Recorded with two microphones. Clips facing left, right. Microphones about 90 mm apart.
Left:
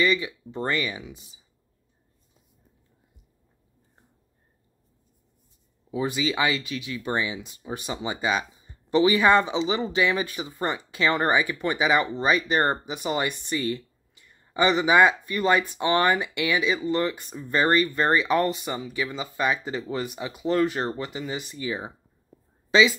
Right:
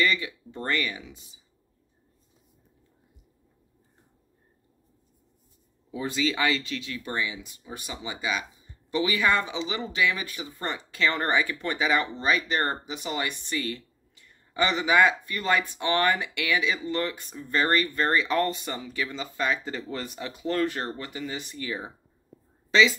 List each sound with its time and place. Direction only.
0.0 s speech: 15° left (ahead or behind)
5.9 s speech: 15° left (ahead or behind)